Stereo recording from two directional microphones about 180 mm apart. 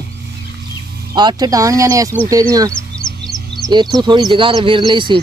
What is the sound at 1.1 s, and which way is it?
Speech, 25° right (ahead or behind).